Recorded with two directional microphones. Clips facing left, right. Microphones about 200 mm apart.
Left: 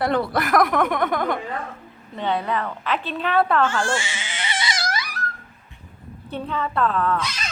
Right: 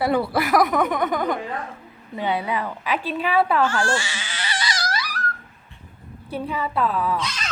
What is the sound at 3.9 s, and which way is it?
Crying, 20° left (ahead or behind).